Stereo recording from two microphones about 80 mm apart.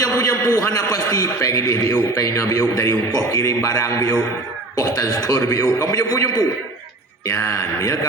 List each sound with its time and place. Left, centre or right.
0.0 s a man's voice: left
7.3 s speech: left